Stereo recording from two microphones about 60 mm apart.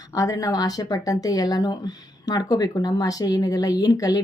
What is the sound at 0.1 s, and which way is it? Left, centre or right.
A woman's voice, left.